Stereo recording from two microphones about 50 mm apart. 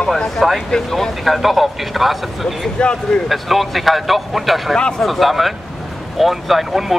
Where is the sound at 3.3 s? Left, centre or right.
Centre.